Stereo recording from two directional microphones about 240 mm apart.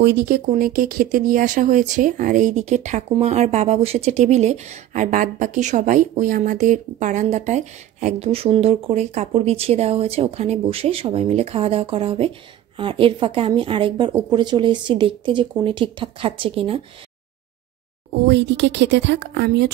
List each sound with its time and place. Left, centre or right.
0.0 s speech: right
18.1 s speech: right